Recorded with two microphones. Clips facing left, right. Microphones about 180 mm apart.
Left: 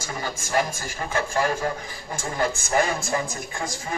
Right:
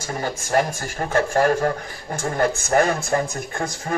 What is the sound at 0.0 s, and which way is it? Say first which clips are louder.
A man's voice: right 4 dB; 55° right (ahead or behind).